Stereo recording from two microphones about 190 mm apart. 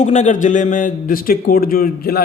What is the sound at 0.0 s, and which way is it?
A man's voice, 40° left (ahead or behind).